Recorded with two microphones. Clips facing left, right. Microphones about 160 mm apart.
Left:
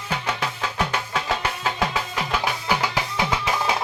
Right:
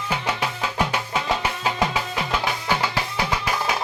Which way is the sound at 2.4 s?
10° left (ahead or behind).